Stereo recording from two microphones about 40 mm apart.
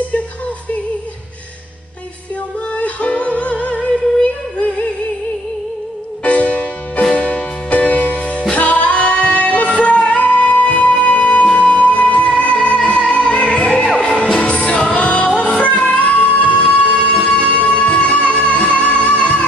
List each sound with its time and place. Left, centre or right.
2.7 s music: left
6.2 s music: left
16.9 s music: centre
17.2 s music: left